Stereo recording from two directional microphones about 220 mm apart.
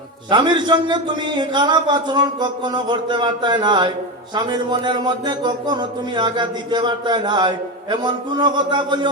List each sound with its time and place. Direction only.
0.3 s speech: 20° right (ahead or behind)